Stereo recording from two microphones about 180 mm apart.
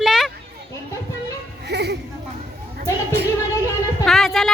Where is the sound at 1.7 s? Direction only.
70° right (ahead or behind).